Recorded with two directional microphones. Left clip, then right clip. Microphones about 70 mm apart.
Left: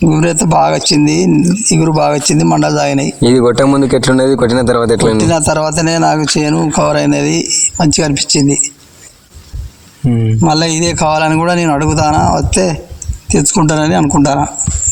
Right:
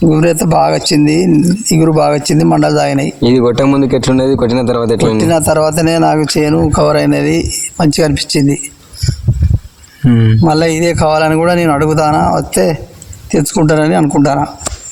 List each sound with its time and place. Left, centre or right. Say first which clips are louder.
0.0 s speech: right 2 dB; right
3.2 s speech: left 1 dB; centre
5.1 s speech: right 1 dB; right
10.4 s speech: right 1 dB; right